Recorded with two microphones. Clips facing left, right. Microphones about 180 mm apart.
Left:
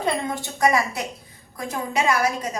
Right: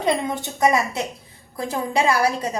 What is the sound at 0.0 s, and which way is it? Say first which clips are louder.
A woman's voice: right 3 dB; 20° right (ahead or behind).